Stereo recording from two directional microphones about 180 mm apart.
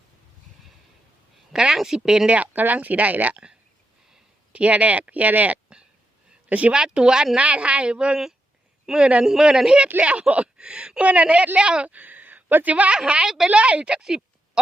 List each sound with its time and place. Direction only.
1.5 s speech: 5° right (ahead or behind)